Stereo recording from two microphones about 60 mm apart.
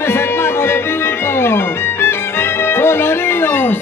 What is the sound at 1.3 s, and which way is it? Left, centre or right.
Music, left.